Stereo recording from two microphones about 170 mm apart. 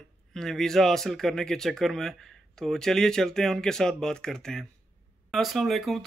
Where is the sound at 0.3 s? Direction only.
5° left (ahead or behind).